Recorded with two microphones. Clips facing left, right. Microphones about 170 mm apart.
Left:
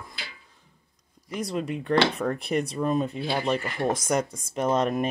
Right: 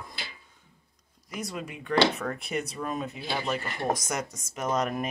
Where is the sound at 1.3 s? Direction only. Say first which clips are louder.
Left 7 dB; 30° left (ahead or behind).